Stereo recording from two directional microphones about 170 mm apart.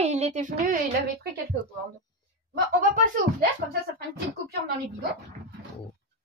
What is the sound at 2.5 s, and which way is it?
Speech, 55° right (ahead or behind).